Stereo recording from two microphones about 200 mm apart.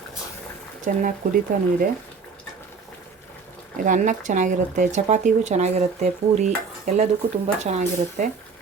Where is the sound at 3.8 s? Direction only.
40° right (ahead or behind).